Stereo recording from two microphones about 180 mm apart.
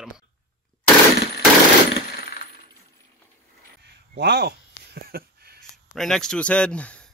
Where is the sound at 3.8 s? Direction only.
70° right (ahead or behind).